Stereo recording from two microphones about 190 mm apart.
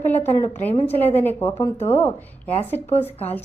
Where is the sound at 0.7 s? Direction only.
35° left (ahead or behind).